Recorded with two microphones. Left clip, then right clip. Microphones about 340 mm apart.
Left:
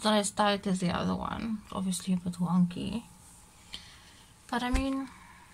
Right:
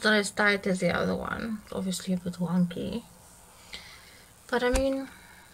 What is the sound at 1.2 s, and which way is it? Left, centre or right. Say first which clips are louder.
Speech: right 3 dB; right.